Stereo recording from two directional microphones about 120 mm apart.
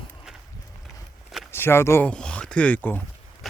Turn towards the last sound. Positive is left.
turn(degrees=15)  # may be behind; listen again after turning